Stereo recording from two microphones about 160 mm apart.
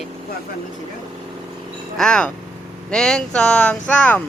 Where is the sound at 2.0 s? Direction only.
5° left (ahead or behind).